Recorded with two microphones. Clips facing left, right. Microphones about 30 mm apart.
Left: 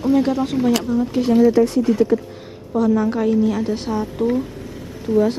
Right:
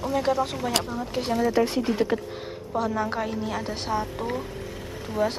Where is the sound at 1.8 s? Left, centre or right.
Right.